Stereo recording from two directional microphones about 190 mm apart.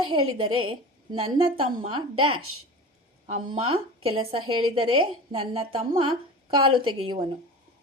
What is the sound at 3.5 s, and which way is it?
A woman's voice, 30° right (ahead or behind).